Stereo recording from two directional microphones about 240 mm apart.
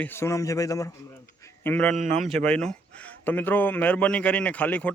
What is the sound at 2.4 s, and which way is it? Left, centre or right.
Speech, centre.